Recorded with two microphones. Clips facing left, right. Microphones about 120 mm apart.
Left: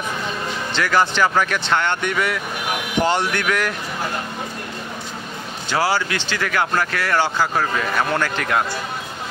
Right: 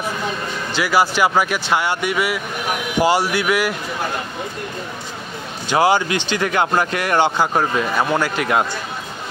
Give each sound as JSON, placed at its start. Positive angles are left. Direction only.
{"t": 0.7, "sound": "speech", "side_deg": -10}
{"t": 5.7, "sound": "speech", "side_deg": -20}